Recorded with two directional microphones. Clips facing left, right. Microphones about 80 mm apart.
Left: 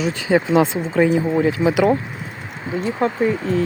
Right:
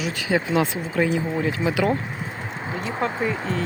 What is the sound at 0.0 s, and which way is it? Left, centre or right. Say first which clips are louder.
Speech: left 5 dB; left.